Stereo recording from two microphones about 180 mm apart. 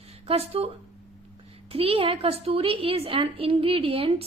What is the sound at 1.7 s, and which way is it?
A woman's voice, 30° right (ahead or behind).